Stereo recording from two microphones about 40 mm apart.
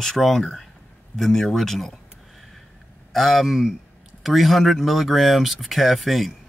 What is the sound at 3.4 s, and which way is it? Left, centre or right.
A man's voice, centre.